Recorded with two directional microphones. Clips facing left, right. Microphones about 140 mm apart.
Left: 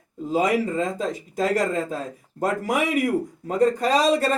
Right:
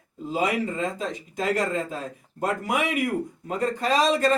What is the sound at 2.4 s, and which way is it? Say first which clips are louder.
Speech: left 2 dB; 40° left (ahead or behind).